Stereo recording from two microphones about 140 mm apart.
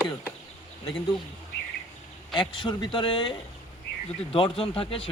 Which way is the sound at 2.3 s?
35° left (ahead or behind).